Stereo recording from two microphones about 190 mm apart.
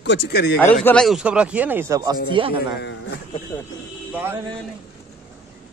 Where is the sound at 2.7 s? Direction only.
60° left (ahead or behind).